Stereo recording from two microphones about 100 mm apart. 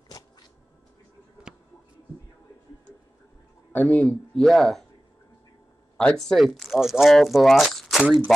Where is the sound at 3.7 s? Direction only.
15° left (ahead or behind).